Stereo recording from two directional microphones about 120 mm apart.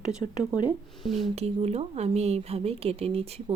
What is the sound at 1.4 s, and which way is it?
Speech, 60° right (ahead or behind).